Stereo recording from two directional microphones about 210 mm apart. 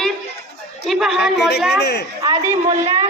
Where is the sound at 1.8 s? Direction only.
55° left (ahead or behind).